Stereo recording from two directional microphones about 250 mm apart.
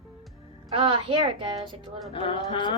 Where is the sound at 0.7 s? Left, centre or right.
Centre.